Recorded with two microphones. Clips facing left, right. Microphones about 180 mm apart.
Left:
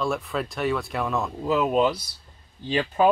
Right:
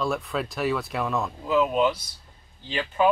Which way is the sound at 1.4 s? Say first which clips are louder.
Left 1 dB; 40° left (ahead or behind).